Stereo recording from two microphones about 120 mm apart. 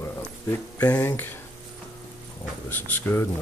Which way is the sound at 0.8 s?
15° left (ahead or behind).